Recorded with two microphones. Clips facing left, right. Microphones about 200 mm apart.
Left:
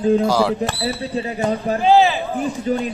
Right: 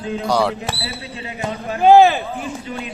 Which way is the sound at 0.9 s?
35° left (ahead or behind).